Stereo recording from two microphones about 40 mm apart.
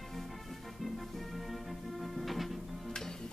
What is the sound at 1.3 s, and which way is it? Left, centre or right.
Music, centre.